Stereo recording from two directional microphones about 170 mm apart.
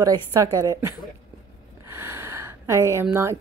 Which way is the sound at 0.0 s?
20° right (ahead or behind).